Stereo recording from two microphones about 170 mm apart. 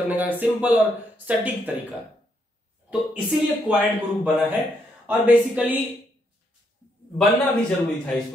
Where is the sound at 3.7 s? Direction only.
5° right (ahead or behind).